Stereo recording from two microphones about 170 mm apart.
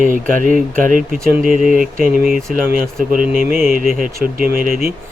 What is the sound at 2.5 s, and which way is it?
Speech, 55° right (ahead or behind).